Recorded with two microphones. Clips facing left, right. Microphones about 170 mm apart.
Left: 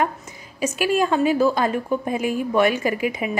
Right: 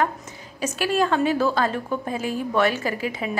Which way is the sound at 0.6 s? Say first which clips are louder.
Left 2 dB; 10° left (ahead or behind).